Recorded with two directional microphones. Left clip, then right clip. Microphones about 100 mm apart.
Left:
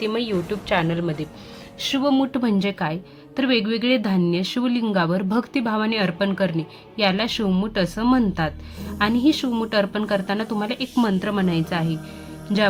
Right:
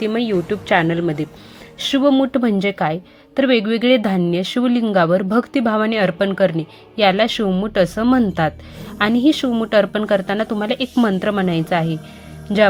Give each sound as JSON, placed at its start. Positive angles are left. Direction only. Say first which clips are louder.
{"t": 0.0, "sound": "a woman's voice", "louder": "right 4 dB", "side_deg": -35}
{"t": 2.0, "sound": "a woman's voice", "louder": "right 6 dB", "side_deg": -35}